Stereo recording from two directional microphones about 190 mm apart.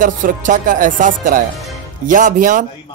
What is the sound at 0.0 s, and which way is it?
Speech, 45° right (ahead or behind).